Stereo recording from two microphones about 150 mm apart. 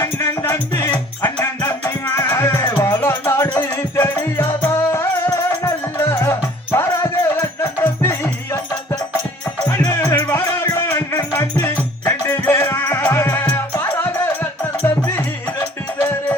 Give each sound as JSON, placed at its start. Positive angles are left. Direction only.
{"t": 0.0, "sound": "music", "side_deg": 15}